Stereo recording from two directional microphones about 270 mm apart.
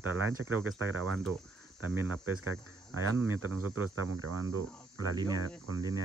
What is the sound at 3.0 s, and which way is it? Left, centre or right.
Speech, right.